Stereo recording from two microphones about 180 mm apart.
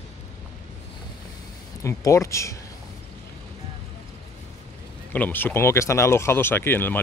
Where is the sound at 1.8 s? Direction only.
15° left (ahead or behind).